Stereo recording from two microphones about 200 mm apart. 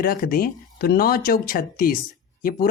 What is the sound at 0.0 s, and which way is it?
Speech, 45° left (ahead or behind).